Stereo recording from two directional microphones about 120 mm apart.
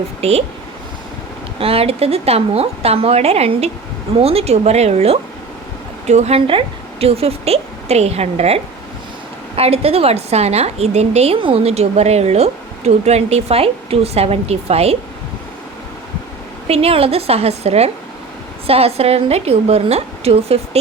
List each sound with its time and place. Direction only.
0.2 s a woman's voice: 60° right (ahead or behind)
1.5 s a woman's voice: 55° right (ahead or behind)
16.6 s a woman's voice: 55° right (ahead or behind)